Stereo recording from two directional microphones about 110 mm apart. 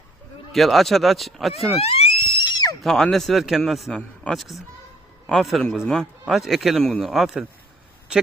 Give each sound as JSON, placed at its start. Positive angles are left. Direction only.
{"t": 0.5, "sound": "a man's voice", "side_deg": 0}
{"t": 1.8, "sound": "a sound", "side_deg": 65}
{"t": 2.8, "sound": "a man's voice", "side_deg": 5}